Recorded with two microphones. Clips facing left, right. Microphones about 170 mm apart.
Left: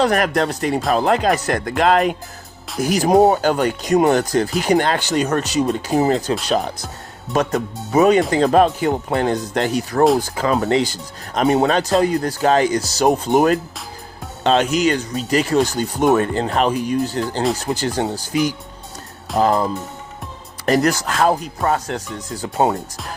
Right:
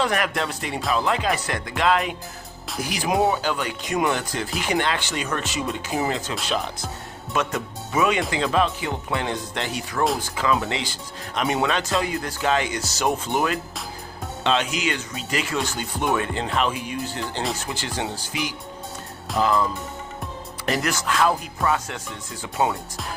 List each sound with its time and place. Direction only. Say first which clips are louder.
0.0 s speech: left 7 dB; 40° left (ahead or behind)